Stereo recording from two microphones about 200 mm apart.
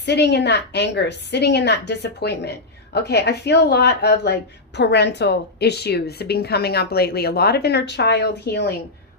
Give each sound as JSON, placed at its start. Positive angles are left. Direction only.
{"t": 0.0, "sound": "speech", "side_deg": 55}